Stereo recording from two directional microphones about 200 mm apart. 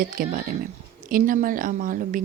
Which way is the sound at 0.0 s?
45° right (ahead or behind).